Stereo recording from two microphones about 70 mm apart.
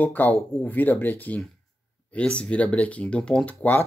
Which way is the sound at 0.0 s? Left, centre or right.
Left.